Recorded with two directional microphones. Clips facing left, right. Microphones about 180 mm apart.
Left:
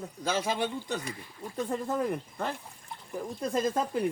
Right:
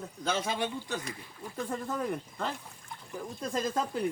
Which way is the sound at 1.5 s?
15° left (ahead or behind).